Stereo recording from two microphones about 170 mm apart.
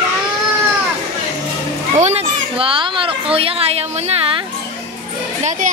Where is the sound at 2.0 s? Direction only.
40° right (ahead or behind).